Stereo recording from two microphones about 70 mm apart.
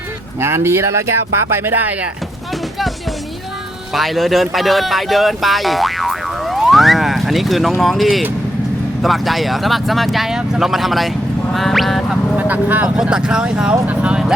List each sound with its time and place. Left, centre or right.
0.3 s speech: right
3.9 s speech: centre
11.5 s quack: centre
12.4 s a sound: right
13.0 s speech: centre